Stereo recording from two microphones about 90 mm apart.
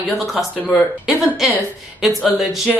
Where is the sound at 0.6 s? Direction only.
15° left (ahead or behind).